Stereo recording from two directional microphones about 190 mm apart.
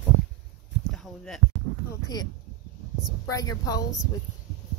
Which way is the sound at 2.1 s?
20° left (ahead or behind).